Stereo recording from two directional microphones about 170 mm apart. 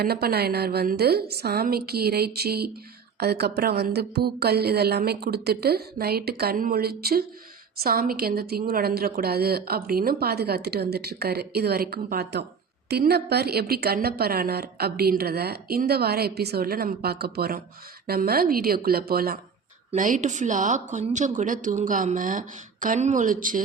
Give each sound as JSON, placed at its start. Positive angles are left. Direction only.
{"t": 0.0, "sound": "a woman's voice", "side_deg": -65}
{"t": 19.9, "sound": "speech", "side_deg": -50}